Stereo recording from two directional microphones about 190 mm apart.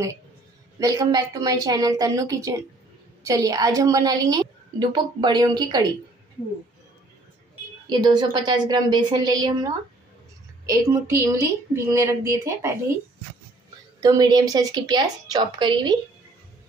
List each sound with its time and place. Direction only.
0.7 s a woman's voice: 20° right (ahead or behind)
7.8 s a woman's voice: 20° right (ahead or behind)
14.0 s a woman's voice: 20° right (ahead or behind)